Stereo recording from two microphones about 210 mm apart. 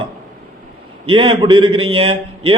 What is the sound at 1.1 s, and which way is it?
A man's voice, 25° right (ahead or behind).